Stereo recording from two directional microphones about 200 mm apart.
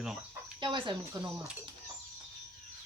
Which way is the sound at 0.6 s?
25° right (ahead or behind).